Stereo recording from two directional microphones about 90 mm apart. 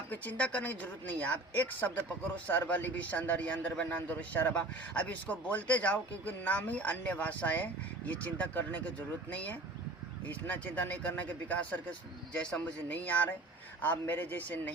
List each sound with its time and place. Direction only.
0.1 s a man's voice: 15° left (ahead or behind)